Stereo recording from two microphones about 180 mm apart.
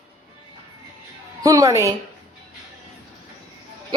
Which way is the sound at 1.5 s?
20° right (ahead or behind).